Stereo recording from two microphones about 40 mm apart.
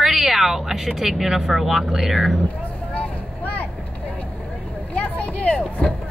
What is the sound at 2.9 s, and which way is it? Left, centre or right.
Vehicle, left.